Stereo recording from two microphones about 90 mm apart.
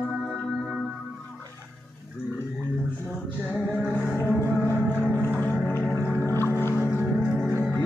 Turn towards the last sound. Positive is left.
turn(degrees=25)  # may be behind; listen again after turning